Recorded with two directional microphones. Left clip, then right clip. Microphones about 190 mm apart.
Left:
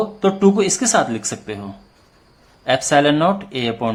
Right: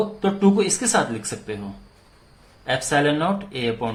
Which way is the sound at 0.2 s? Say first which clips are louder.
Left 6 dB; 30° left (ahead or behind).